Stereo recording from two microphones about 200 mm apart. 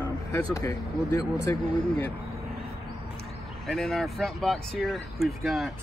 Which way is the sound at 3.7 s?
Centre (ahead or behind).